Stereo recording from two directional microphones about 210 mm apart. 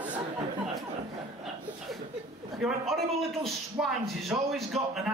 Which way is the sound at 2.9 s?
Centre (ahead or behind).